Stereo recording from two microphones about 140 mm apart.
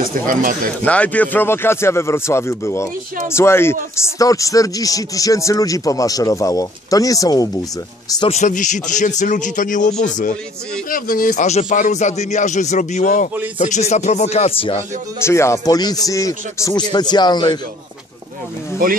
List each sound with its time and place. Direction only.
0.3 s speech: 75° right (ahead or behind)
0.8 s a man's voice: 10° left (ahead or behind); by 7.6 s 25° left (ahead or behind)
8.3 s a man's voice: 60° left (ahead or behind)
10.9 s a man's voice: 90° left; by 14.8 s 45° left (ahead or behind)
15.2 s speech: 20° left (ahead or behind)